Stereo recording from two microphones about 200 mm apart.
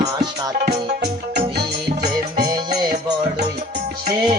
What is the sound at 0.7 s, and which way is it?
Music, 55° right (ahead or behind).